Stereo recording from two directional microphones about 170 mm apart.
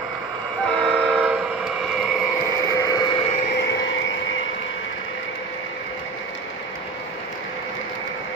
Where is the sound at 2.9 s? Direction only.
25° left (ahead or behind).